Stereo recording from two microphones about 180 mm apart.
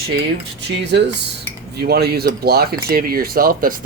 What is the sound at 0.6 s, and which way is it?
Speech, 70° right (ahead or behind).